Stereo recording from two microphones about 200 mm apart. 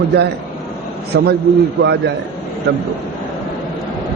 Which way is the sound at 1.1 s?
55° right (ahead or behind).